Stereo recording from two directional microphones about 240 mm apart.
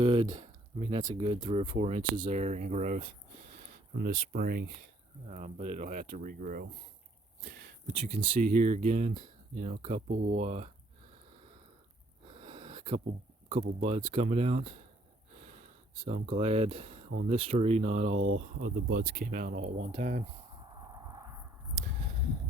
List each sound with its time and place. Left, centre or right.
0.0 s speech: right
5.3 s speech: right
12.3 s a sound: right
13.5 s speech: right
15.4 s gasp: right
16.0 s speech: right
18.9 s speech: right
20.6 s a sound: centre